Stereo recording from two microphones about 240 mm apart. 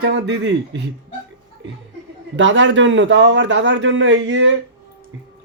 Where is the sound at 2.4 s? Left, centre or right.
Right.